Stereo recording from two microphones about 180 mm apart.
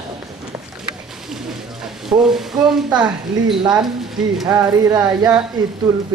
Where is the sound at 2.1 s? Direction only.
15° right (ahead or behind).